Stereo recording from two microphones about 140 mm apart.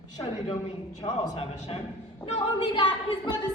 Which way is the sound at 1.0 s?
45° left (ahead or behind).